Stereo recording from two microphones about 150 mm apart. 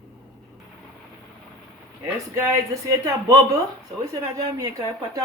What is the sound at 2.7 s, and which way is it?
Speech, 20° right (ahead or behind).